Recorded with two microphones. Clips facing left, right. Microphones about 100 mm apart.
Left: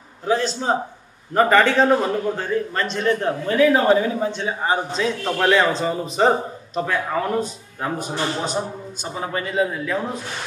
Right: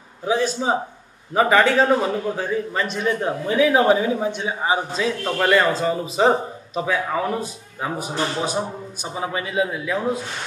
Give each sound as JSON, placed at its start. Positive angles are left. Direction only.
{"t": 0.3, "sound": "a man's voice", "side_deg": -10}